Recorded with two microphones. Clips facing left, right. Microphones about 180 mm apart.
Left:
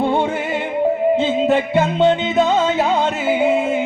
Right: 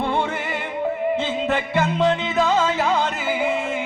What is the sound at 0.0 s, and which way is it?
Music, 25° left (ahead or behind).